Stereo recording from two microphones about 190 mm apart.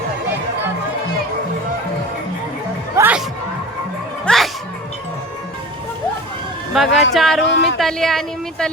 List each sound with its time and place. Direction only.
2.9 s music: 10° right (ahead or behind)
4.3 s music: 5° left (ahead or behind)
6.7 s a woman's voice: centre (ahead or behind)
7.4 s a sound: 65° left (ahead or behind)
7.8 s a woman's voice: centre (ahead or behind)